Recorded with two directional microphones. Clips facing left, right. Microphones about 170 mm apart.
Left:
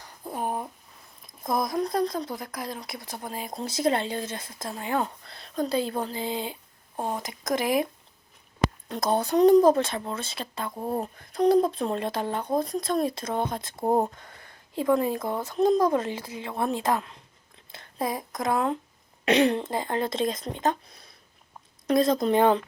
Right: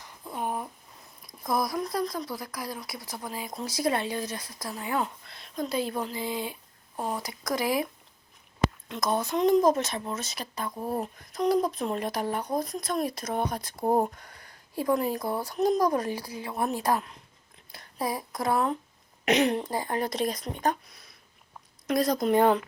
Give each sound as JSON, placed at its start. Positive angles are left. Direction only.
{"t": 0.0, "sound": "a sound", "side_deg": 35}
{"t": 1.5, "sound": "speech", "side_deg": 25}
{"t": 8.9, "sound": "speech", "side_deg": 30}
{"t": 17.7, "sound": "a sound", "side_deg": 20}
{"t": 18.3, "sound": "speech", "side_deg": 20}
{"t": 19.2, "sound": "speech", "side_deg": 30}